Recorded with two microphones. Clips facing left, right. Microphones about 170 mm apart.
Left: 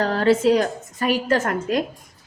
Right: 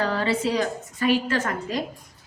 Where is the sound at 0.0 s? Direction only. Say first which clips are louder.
Left 6 dB; 45° left (ahead or behind).